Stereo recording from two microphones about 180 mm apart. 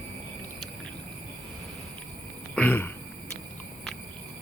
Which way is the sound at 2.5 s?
10° left (ahead or behind).